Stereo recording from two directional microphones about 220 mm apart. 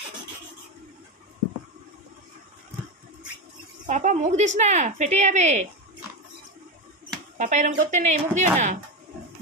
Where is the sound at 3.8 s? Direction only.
35° right (ahead or behind).